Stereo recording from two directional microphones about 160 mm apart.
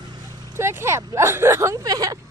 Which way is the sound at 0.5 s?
15° right (ahead or behind).